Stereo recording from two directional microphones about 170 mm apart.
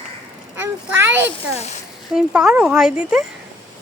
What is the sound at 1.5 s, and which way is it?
Speech, 40° left (ahead or behind).